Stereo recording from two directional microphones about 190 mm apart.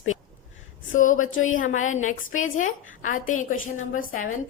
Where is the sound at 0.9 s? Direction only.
45° left (ahead or behind).